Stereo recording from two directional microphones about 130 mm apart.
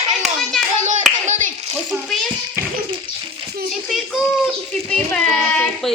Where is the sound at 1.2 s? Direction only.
70° right (ahead or behind).